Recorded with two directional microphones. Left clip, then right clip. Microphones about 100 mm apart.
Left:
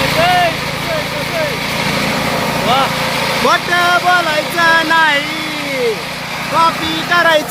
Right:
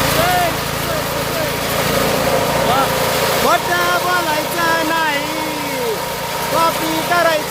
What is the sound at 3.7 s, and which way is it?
Vehicle, 35° left (ahead or behind).